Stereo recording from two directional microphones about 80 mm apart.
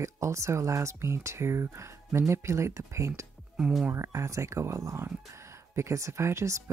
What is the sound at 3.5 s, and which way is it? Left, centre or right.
Speech, centre.